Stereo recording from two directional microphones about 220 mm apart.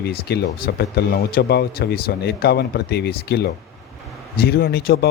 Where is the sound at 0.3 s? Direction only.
45° left (ahead or behind).